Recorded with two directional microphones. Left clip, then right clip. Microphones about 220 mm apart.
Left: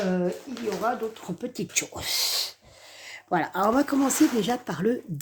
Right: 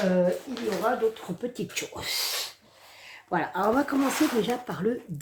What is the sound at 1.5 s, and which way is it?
Speech, 50° left (ahead or behind).